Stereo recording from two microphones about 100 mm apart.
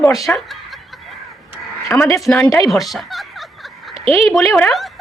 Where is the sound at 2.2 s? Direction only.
5° left (ahead or behind).